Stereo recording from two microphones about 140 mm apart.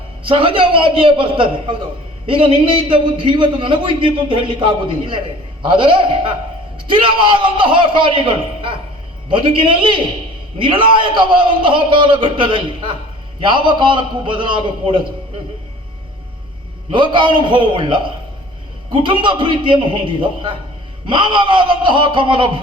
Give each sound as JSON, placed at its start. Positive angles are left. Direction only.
{"t": 0.3, "sound": "a man's voice", "side_deg": -40}
{"t": 16.9, "sound": "a man's voice", "side_deg": -35}